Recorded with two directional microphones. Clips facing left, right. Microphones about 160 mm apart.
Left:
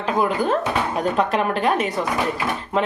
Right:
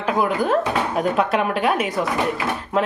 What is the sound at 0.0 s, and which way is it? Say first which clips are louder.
Speech: even; 5° right (ahead or behind).